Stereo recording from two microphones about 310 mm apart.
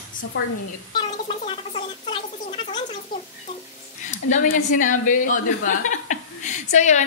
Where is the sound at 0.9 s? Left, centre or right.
Centre.